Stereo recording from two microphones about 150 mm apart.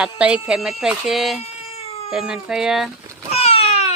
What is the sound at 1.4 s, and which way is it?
Cat, 45° left (ahead or behind).